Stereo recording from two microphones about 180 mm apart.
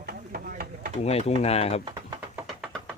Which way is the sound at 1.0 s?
35° left (ahead or behind).